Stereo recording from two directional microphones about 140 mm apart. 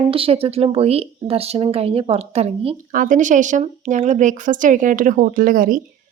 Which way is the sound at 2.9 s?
70° right (ahead or behind).